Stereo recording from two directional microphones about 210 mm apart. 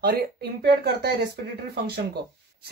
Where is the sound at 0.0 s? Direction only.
50° right (ahead or behind).